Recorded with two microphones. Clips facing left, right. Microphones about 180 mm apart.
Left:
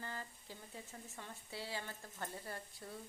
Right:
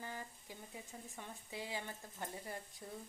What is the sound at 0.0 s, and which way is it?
Speech, 15° right (ahead or behind).